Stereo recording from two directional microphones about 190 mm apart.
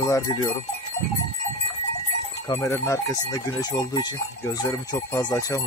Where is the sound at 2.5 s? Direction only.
15° left (ahead or behind).